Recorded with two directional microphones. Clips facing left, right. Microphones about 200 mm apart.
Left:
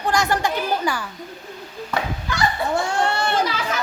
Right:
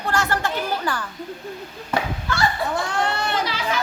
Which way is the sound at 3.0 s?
25° left (ahead or behind).